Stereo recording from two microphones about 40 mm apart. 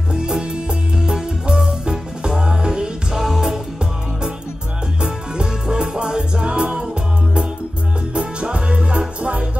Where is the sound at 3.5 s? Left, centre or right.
Centre.